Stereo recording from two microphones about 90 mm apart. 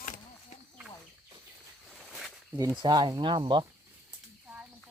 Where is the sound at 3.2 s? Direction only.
65° right (ahead or behind).